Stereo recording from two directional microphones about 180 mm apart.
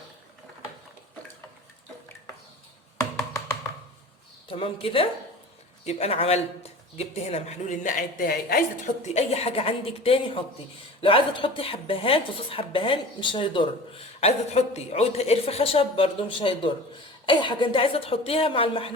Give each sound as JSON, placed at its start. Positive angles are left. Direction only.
{"t": 3.0, "sound": "tap", "side_deg": 20}
{"t": 4.4, "sound": "speech", "side_deg": 30}
{"t": 9.1, "sound": "speech", "side_deg": 35}